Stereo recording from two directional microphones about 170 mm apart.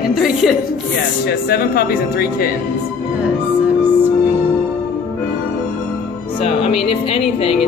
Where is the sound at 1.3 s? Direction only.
65° left (ahead or behind).